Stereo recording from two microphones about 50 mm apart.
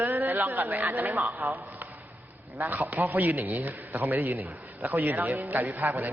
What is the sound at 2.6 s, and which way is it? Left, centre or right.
A man's voice, right.